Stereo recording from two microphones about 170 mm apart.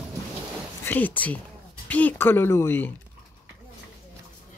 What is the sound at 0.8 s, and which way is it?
Speech, 10° left (ahead or behind).